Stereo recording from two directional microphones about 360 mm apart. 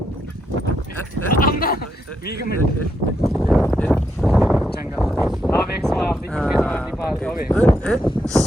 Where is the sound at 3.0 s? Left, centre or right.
Right.